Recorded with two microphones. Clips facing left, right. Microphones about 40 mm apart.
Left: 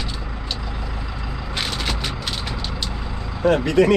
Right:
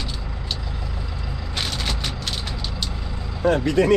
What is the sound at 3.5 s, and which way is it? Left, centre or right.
Speech, left.